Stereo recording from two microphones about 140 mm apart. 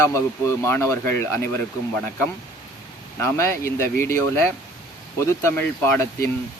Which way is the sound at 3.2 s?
20° left (ahead or behind).